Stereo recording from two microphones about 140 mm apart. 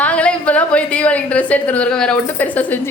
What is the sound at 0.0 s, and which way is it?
A woman's voice, 10° left (ahead or behind).